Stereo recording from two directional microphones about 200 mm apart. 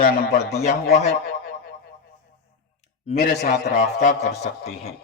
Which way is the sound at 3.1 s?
50° left (ahead or behind).